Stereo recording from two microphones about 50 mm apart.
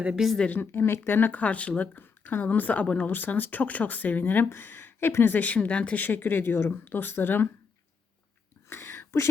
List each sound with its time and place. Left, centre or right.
0.2 s a woman's voice: centre
0.6 s speech: left
2.0 s a woman's voice: left
2.8 s speech: left
3.1 s speech: left
8.7 s a sound: left